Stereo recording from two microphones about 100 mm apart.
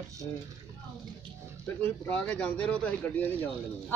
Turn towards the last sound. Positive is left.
turn(degrees=15)  # may be behind; listen again after turning